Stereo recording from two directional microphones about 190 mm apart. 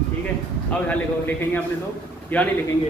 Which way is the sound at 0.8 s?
10° left (ahead or behind).